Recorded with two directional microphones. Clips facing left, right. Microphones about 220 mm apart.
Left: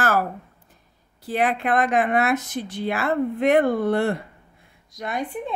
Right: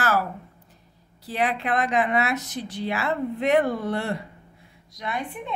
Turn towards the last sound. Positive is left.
turn(degrees=45)  # may be behind; listen again after turning